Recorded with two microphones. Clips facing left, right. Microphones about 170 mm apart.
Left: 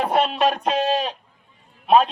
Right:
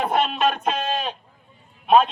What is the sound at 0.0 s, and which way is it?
A man's voice, 35° left (ahead or behind).